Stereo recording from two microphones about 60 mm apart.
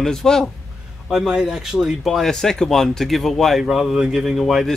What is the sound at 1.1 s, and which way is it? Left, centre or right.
A man's voice, centre.